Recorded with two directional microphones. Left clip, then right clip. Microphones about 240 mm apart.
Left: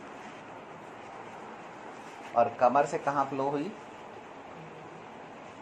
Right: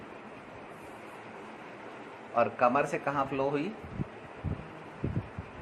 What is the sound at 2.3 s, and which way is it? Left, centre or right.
Speech, right.